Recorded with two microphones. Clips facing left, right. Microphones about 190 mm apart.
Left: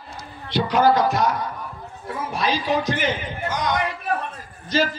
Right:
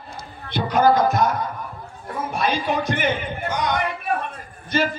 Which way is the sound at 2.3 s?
55° right (ahead or behind).